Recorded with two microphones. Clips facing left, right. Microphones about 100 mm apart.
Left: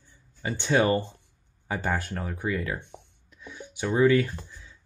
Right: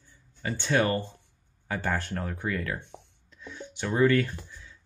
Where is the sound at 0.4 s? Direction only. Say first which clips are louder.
Left 2 dB; 15° left (ahead or behind).